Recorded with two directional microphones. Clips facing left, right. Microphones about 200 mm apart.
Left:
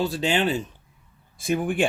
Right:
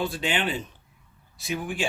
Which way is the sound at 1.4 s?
50° left (ahead or behind).